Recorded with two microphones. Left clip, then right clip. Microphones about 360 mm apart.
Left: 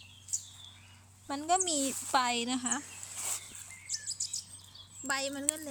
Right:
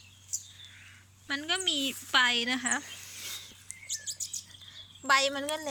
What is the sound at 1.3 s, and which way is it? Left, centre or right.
A woman's voice, centre.